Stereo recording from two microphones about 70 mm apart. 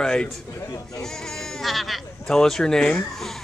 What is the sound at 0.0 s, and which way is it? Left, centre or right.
A man's voice, centre.